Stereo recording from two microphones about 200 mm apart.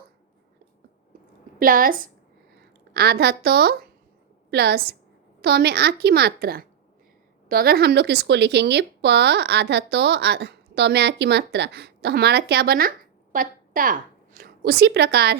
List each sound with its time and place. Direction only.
1.5 s a woman's voice: 45° right (ahead or behind)